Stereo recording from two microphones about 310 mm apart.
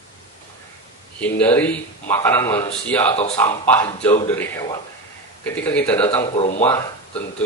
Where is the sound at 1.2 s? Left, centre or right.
Centre.